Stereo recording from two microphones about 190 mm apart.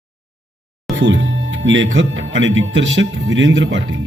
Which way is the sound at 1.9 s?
80° right.